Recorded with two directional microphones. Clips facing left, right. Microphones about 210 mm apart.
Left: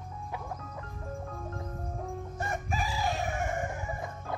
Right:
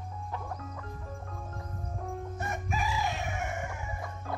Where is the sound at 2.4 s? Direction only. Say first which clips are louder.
Left 2 dB; 30° left (ahead or behind).